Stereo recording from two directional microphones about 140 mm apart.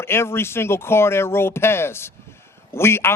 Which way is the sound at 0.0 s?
15° left (ahead or behind).